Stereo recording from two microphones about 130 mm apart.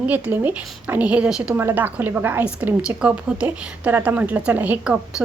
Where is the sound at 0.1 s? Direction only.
15° right (ahead or behind).